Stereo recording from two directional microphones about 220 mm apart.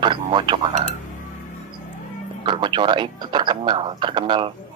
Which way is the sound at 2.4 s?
20° right (ahead or behind).